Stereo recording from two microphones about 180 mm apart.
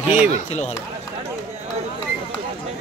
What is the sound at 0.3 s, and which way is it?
Speech, 40° left (ahead or behind).